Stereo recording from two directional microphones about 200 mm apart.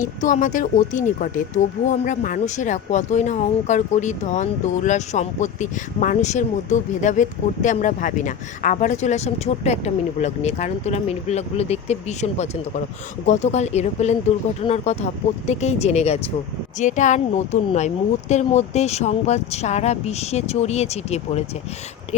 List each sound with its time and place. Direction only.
0.0 s speech: 40° left (ahead or behind)